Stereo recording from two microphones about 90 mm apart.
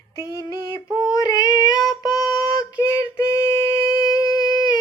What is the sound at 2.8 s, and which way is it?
Female singing, 30° left (ahead or behind).